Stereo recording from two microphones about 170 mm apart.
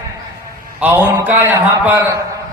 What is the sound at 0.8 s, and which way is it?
Speech, 10° right (ahead or behind).